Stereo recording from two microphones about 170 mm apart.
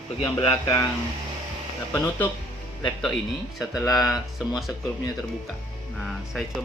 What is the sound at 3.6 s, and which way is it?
Speech, centre (ahead or behind).